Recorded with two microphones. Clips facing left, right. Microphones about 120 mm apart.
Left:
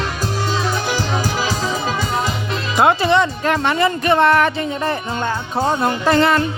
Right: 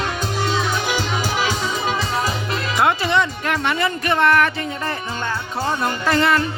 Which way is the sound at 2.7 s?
25° left (ahead or behind).